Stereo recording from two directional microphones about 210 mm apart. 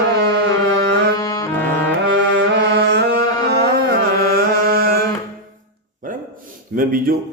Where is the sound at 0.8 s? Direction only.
50° right (ahead or behind).